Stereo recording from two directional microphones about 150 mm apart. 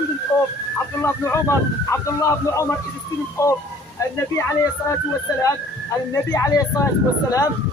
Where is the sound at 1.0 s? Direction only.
20° left (ahead or behind).